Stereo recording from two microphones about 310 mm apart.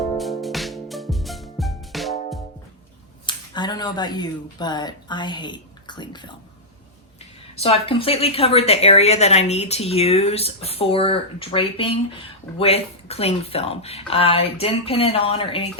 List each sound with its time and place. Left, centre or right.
0.2 s music: centre
3.2 s speech: centre
7.5 s speech: centre